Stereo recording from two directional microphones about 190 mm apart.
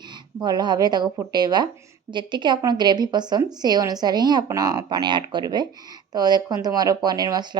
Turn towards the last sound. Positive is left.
turn(degrees=-20)  # may be behind; listen again after turning